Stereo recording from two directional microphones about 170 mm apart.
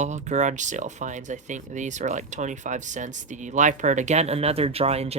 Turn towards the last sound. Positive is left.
turn(degrees=-40)  # may be behind; listen again after turning